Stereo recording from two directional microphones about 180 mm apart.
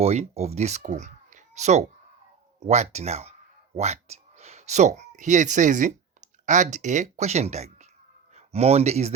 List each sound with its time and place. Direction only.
0.0 s speech: 35° right (ahead or behind)